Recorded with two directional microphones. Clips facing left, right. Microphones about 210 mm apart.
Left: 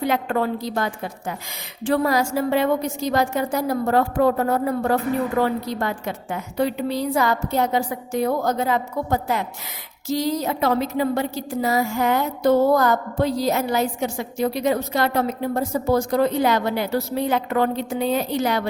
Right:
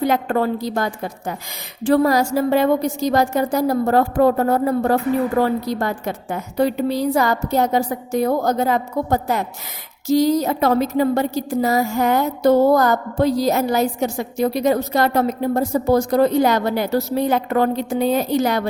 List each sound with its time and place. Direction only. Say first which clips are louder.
0.0 s a woman's voice: right 3 dB; 40° right (ahead or behind)